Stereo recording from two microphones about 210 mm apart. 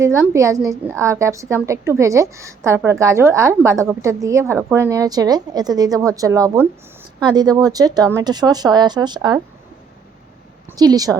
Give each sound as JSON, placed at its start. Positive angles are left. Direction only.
{"t": 0.0, "sound": "a woman's voice", "side_deg": -15}
{"t": 10.7, "sound": "a woman's voice", "side_deg": -20}